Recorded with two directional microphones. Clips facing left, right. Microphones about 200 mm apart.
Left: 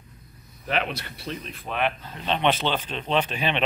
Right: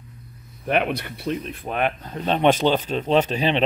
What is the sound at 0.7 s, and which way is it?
Speech, 55° right (ahead or behind).